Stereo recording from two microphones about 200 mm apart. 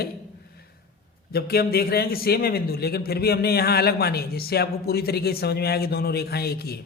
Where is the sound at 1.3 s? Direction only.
50° left (ahead or behind).